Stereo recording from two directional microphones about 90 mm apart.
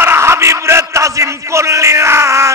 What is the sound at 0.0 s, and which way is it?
Speech, 30° right (ahead or behind).